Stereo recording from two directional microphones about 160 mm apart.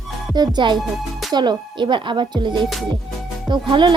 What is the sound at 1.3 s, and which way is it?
Speech, 25° right (ahead or behind).